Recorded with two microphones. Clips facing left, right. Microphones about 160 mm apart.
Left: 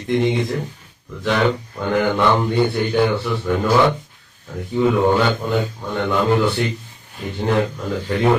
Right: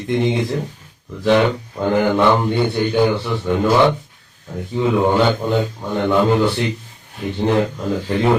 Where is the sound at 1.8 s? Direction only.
30° right (ahead or behind).